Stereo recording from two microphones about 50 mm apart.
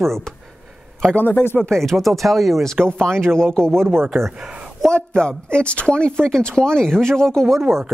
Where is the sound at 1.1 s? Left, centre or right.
Left.